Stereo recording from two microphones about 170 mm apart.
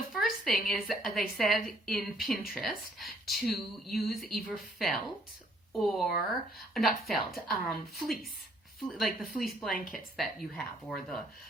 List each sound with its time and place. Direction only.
0.1 s a woman's voice: centre (ahead or behind)
9.7 s a woman's voice: 55° left (ahead or behind)
10.2 s a woman's voice: centre (ahead or behind)